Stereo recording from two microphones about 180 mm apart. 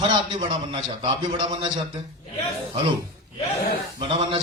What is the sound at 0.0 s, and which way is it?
A man's voice, 25° right (ahead or behind).